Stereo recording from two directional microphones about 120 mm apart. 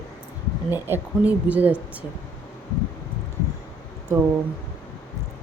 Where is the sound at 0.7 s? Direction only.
15° right (ahead or behind).